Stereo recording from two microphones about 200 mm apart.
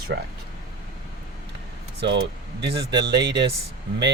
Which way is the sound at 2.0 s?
55° right (ahead or behind).